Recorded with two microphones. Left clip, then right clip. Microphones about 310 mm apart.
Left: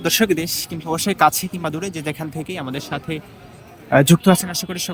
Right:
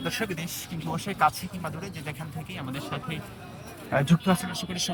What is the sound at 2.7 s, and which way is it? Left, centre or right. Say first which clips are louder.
Speech: left 8 dB; centre.